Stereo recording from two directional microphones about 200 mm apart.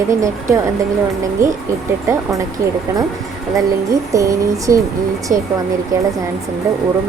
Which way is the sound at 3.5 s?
15° right (ahead or behind).